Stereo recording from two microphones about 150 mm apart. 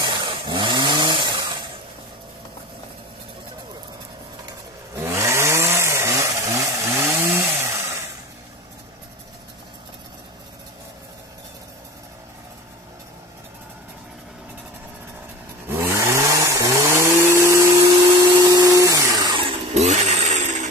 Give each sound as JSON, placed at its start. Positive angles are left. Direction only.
{"t": 0.0, "sound": "chainsaw", "side_deg": -30}
{"t": 4.9, "sound": "chainsaw", "side_deg": -20}
{"t": 15.8, "sound": "chainsaw", "side_deg": -15}